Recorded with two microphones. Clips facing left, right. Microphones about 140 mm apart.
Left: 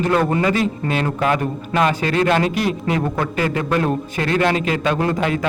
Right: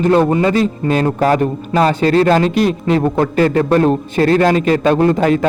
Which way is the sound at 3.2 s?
40° right (ahead or behind).